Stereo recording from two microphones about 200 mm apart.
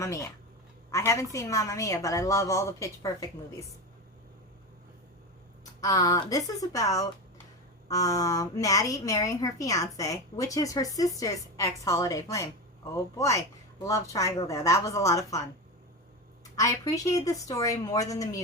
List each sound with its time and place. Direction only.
0.0 s speech: 15° left (ahead or behind)
5.8 s speech: 15° left (ahead or behind)
16.6 s speech: 15° left (ahead or behind)